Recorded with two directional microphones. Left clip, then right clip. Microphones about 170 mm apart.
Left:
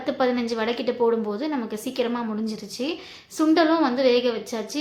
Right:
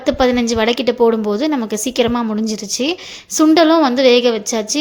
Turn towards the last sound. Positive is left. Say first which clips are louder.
# right 10 dB
turn(degrees=-50)  # may be behind; listen again after turning